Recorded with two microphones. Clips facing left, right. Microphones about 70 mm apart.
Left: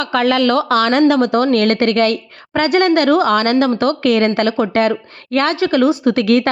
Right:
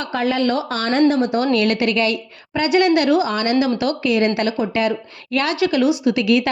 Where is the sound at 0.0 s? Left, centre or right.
Left.